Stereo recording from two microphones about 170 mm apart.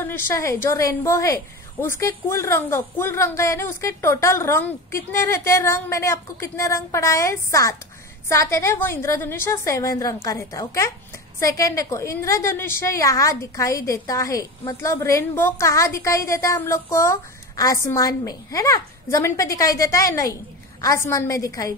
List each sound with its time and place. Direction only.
0.0 s a woman's voice: 15° left (ahead or behind)